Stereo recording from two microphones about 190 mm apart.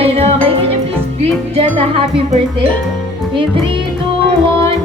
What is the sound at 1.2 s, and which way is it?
Speech, 30° right (ahead or behind).